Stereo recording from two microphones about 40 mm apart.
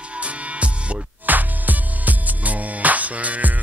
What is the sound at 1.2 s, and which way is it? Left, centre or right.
Music, right.